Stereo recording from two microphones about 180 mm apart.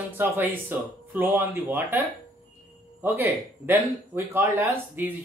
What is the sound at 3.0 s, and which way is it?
Speech, 10° right (ahead or behind).